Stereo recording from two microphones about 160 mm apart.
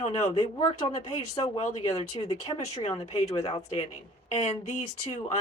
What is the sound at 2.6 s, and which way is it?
Speech, 40° left (ahead or behind).